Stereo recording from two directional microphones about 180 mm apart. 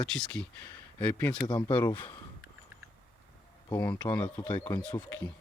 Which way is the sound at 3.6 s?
25° left (ahead or behind).